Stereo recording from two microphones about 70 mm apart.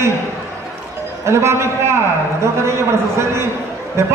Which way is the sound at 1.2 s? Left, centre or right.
Right.